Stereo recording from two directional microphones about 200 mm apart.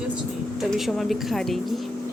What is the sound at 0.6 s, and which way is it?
Speech, centre (ahead or behind).